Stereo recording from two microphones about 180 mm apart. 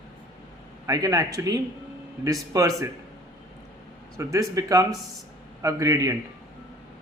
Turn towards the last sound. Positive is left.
turn(degrees=-20)  # may be behind; listen again after turning